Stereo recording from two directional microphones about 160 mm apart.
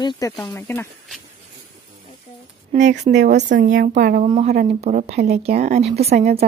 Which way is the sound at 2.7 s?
50° right (ahead or behind).